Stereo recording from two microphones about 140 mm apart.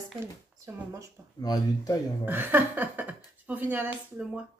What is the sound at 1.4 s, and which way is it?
Speech, 25° left (ahead or behind).